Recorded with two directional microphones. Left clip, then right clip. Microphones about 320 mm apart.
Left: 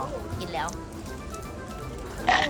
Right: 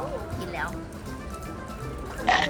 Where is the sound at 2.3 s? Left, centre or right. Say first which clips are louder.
Even; centre.